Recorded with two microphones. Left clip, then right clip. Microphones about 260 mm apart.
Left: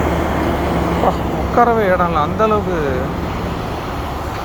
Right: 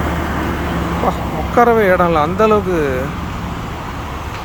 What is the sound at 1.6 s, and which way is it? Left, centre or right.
Speech, centre.